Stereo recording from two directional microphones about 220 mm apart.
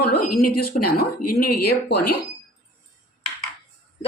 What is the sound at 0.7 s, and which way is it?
Speech, 40° left (ahead or behind).